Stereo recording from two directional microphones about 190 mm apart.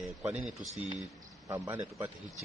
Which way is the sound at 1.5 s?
15° right (ahead or behind).